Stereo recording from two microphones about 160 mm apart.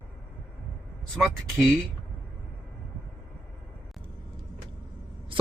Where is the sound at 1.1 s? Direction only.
Centre (ahead or behind).